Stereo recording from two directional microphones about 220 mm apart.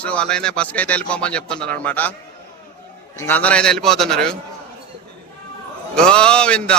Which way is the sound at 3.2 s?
10° left (ahead or behind).